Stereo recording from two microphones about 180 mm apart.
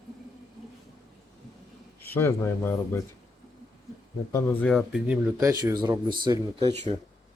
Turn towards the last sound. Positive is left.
turn(degrees=-25)  # may be behind; listen again after turning